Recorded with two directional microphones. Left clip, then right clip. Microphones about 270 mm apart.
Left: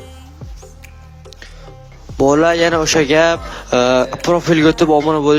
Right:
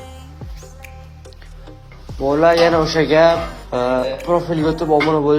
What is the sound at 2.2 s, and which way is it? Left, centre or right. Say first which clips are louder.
A man's voice: left 1 dB; left.